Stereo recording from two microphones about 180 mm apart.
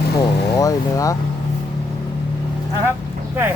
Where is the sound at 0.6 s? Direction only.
20° left (ahead or behind).